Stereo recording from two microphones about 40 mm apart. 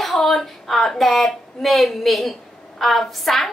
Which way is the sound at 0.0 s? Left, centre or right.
Centre.